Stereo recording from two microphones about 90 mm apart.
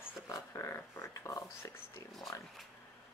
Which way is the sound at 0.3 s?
30° left (ahead or behind).